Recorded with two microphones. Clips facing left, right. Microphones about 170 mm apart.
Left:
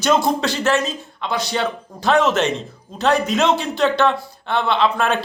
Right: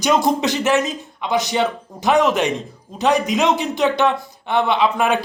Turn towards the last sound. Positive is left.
turn(degrees=-15)  # may be behind; listen again after turning